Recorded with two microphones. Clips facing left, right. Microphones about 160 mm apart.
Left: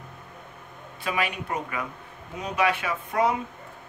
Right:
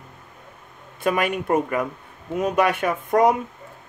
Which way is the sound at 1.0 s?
50° right (ahead or behind).